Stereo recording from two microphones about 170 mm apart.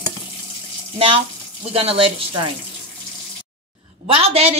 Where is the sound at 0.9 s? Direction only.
30° right (ahead or behind).